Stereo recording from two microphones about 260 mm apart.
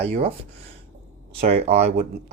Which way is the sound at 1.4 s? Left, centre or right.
Right.